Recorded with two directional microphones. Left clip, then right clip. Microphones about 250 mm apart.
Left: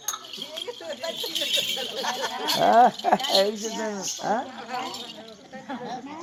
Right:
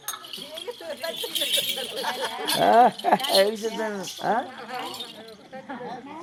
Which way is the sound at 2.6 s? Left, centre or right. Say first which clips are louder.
Even; centre.